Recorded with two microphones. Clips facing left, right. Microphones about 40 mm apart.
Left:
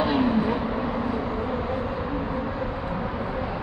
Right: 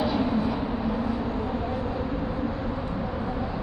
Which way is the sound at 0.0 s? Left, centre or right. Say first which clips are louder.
Left 3 dB; left.